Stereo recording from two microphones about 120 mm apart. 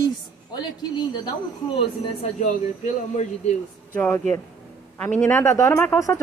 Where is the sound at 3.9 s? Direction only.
15° left (ahead or behind).